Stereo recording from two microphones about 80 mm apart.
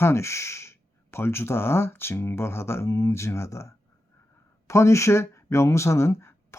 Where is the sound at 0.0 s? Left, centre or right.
Left.